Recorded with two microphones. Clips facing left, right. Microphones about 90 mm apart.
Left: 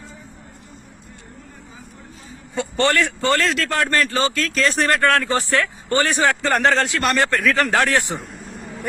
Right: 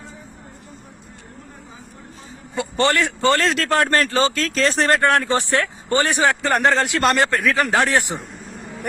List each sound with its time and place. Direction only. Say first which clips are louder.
2.7 s speech: even; 20° right (ahead or behind)
6.6 s speech: even; centre (ahead or behind)
6.8 s speech: right 2 dB; 25° right (ahead or behind)
7.3 s speech: even; 15° right (ahead or behind)
8.2 s vehicle: even; centre (ahead or behind)